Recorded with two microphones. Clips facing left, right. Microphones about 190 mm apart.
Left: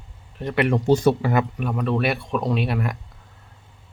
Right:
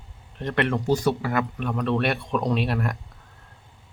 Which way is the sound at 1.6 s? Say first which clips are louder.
Left 1 dB; 5° left (ahead or behind).